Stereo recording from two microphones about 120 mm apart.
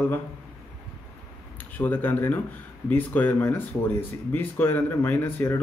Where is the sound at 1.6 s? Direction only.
15° left (ahead or behind).